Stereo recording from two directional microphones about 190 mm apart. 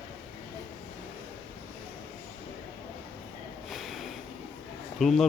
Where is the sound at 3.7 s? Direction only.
Centre (ahead or behind).